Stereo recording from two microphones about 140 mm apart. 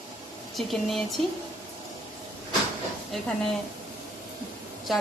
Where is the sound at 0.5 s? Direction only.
Centre (ahead or behind).